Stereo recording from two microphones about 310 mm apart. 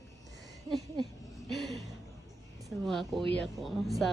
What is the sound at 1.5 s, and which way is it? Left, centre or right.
A woman's voice, centre.